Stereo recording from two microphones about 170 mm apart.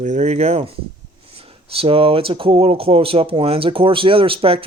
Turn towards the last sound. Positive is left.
turn(degrees=-35)  # may be behind; listen again after turning